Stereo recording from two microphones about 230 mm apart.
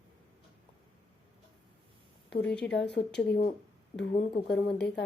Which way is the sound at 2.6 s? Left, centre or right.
Left.